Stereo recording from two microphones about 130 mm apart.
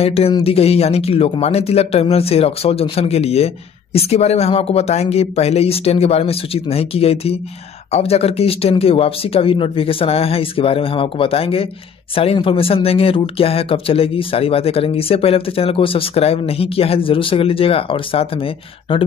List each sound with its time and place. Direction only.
0.0 s speech: 50° left (ahead or behind)